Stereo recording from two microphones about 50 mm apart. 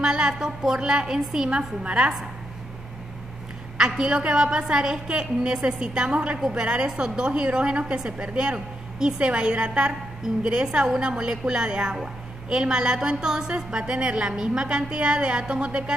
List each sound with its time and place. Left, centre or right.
0.0 s a woman's voice: centre
1.5 s a woman's voice: right
3.7 s a woman's voice: centre